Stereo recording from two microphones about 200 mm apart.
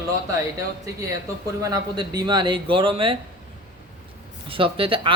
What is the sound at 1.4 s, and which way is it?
A man's voice, 15° right (ahead or behind).